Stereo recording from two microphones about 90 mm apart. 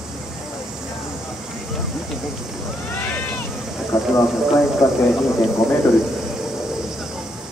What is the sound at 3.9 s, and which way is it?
Speech, 45° left (ahead or behind).